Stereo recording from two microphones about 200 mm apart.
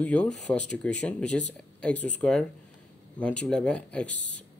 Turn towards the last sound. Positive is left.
turn(degrees=5)  # may be behind; listen again after turning